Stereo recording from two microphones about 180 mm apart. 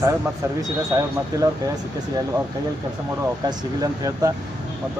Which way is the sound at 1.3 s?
20° right (ahead or behind).